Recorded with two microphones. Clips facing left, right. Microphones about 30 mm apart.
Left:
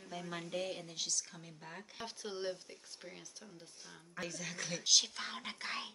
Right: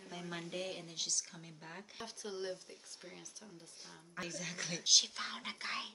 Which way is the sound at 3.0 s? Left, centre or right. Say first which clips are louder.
Left 1 dB; centre.